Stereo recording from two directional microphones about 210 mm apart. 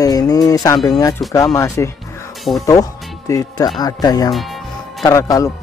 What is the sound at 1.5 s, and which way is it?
Speech, 15° left (ahead or behind).